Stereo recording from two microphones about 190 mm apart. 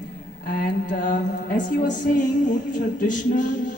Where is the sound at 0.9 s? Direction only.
45° left (ahead or behind).